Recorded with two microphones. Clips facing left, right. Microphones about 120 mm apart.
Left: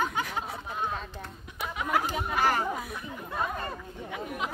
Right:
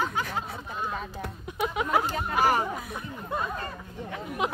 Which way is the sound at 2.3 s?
20° right (ahead or behind).